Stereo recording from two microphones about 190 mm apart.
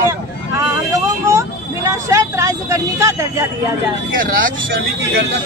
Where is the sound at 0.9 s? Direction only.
15° right (ahead or behind).